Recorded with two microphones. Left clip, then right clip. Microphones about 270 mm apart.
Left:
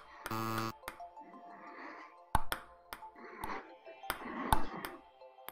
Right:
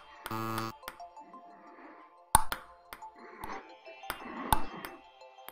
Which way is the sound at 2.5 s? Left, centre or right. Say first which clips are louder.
Right 2 dB; centre.